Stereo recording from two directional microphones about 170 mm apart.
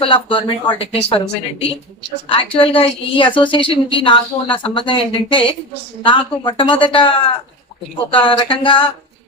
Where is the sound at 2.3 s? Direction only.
30° left (ahead or behind).